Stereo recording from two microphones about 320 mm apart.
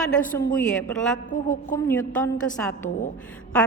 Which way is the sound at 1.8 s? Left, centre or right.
Centre.